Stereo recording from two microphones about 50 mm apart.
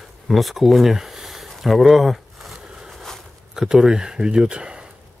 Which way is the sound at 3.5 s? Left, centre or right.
Centre.